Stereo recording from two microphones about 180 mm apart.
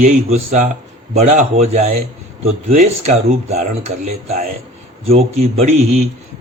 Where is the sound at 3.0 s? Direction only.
40° right (ahead or behind).